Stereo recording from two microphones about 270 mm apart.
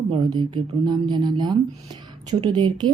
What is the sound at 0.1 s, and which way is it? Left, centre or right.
Speech, centre.